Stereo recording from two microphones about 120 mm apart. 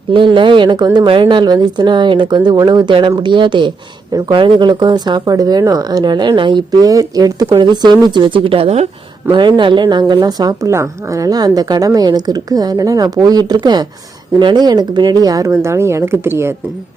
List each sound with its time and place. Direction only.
0.1 s speech: 45° right (ahead or behind)
9.3 s speech: 40° right (ahead or behind); by 16.5 s 20° right (ahead or behind)